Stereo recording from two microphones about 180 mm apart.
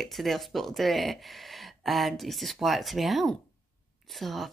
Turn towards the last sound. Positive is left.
turn(degrees=0)  # may be behind; listen again after turning